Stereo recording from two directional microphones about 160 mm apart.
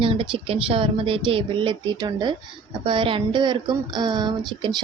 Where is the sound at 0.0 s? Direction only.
35° right (ahead or behind).